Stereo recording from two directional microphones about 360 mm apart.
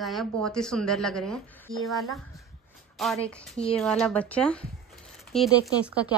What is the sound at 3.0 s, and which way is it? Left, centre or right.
A woman's voice, centre.